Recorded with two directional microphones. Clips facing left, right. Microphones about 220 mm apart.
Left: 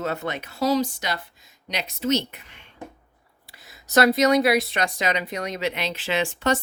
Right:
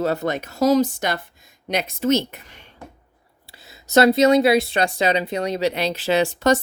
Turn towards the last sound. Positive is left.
turn(degrees=-40)  # may be behind; listen again after turning